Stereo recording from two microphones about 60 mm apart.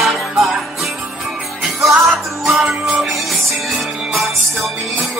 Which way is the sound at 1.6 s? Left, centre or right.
Centre.